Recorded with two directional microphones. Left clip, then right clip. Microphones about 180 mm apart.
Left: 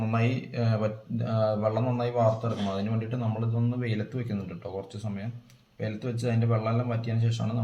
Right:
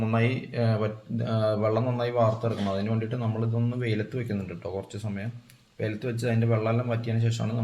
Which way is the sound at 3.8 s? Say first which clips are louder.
Right 3 dB; 35° right (ahead or behind).